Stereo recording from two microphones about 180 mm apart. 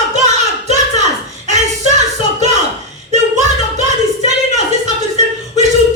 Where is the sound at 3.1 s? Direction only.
40° right (ahead or behind).